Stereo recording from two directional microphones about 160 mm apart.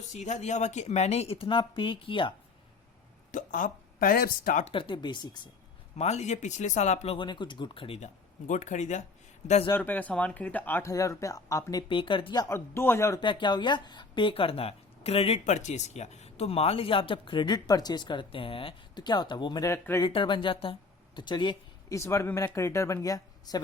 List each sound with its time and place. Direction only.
0.1 s speech: 50° left (ahead or behind); by 2.3 s 30° left (ahead or behind)
3.3 s speech: 55° left (ahead or behind)
4.6 s speech: 35° left (ahead or behind)
6.0 s speech: 45° left (ahead or behind)
9.7 s speech: 10° left (ahead or behind)
13.2 s speech: 30° left (ahead or behind)
20.0 s speech: 30° left (ahead or behind)